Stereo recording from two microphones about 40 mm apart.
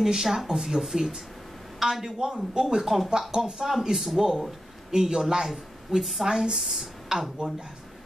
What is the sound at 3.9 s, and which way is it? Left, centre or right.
A man's voice, centre.